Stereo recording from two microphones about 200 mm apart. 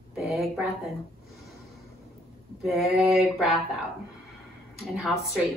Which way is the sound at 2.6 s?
Centre (ahead or behind).